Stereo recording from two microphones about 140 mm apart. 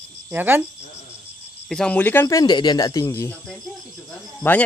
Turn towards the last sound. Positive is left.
turn(degrees=15)  # may be behind; listen again after turning